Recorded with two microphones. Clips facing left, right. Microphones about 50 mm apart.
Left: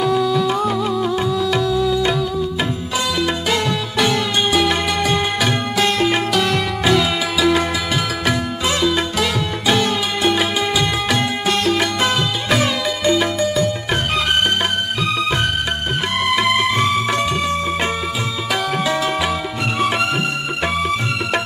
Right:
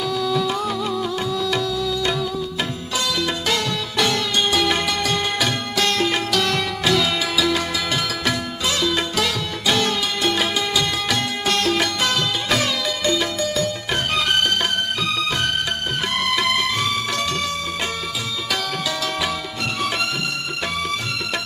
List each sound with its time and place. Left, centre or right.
0.0 s music: left
0.3 s music: centre
3.2 s music: centre
16.3 s music: centre